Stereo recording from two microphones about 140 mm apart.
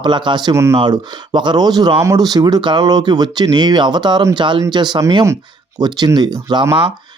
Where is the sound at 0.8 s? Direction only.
35° right (ahead or behind).